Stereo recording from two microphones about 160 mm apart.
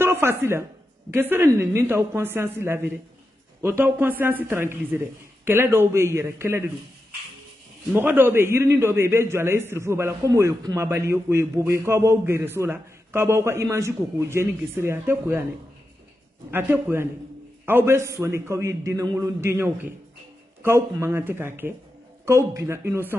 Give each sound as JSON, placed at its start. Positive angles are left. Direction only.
{"t": 0.0, "sound": "a woman's voice", "side_deg": -15}
{"t": 7.9, "sound": "a man's voice", "side_deg": -10}
{"t": 16.4, "sound": "a man's voice", "side_deg": -15}